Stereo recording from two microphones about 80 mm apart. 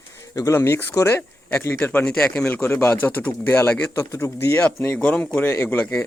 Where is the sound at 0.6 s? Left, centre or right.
Left.